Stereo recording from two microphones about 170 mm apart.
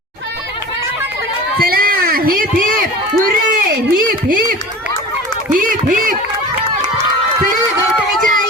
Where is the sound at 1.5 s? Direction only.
60° right (ahead or behind).